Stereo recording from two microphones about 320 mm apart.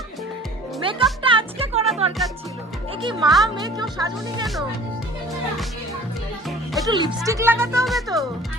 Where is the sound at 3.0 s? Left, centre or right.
Centre.